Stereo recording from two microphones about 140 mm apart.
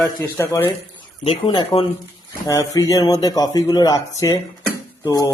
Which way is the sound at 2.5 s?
25° left (ahead or behind).